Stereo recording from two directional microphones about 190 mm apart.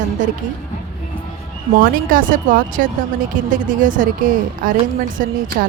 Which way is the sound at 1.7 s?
50° right (ahead or behind).